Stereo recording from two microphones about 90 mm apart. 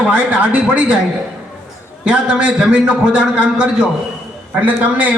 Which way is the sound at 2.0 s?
10° right (ahead or behind).